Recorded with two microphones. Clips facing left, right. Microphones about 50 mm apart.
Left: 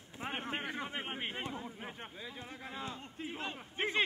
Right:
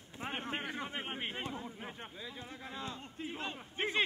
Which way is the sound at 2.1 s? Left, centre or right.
Left.